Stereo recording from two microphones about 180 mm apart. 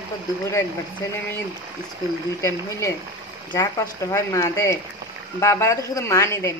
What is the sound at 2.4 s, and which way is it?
A woman's voice, 15° left (ahead or behind).